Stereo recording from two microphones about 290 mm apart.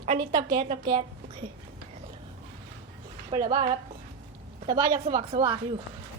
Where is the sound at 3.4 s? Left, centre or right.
Right.